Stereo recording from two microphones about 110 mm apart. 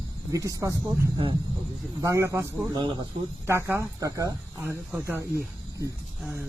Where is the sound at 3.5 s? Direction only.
20° right (ahead or behind).